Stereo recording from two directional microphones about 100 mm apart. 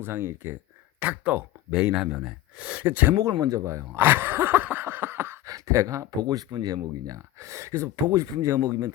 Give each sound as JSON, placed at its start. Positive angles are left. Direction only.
{"t": 0.0, "sound": "speech", "side_deg": -25}
{"t": 1.7, "sound": "speech", "side_deg": -5}
{"t": 3.2, "sound": "speech", "side_deg": -40}